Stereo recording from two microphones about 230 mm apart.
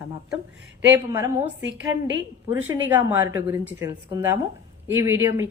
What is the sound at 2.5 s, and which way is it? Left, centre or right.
A woman's voice, centre.